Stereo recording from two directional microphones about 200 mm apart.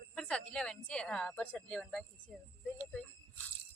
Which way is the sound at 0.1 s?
5° left (ahead or behind).